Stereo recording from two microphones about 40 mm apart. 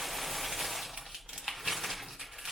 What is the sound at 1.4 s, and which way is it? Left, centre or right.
Crushing, centre.